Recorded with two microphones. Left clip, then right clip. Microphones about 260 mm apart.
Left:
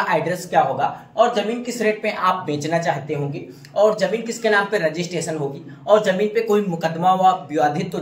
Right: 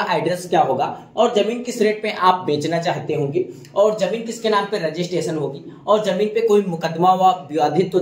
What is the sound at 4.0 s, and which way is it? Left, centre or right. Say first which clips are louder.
A man's voice: even; left.